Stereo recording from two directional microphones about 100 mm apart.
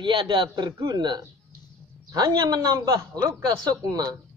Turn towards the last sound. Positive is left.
turn(degrees=-40)  # may be behind; listen again after turning